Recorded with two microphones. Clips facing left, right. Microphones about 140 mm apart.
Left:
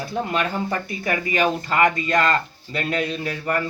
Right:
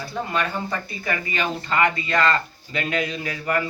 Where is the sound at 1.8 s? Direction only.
45° left (ahead or behind).